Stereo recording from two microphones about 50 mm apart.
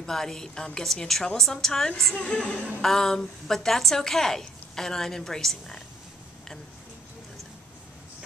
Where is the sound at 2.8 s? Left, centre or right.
Centre.